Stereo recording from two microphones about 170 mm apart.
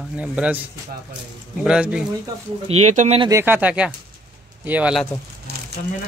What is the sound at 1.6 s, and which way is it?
Speech, 5° right (ahead or behind).